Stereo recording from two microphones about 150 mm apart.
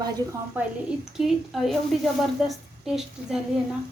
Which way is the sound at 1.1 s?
Centre (ahead or behind).